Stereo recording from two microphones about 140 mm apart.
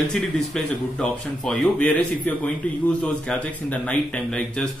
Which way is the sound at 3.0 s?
10° left (ahead or behind).